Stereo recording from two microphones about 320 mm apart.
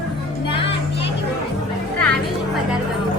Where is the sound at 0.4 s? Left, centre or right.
Centre.